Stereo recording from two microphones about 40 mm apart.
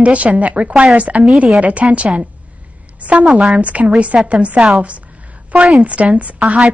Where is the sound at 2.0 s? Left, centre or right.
Right.